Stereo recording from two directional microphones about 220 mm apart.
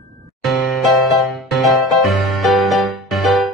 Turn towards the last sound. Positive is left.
turn(degrees=0)  # may be behind; listen again after turning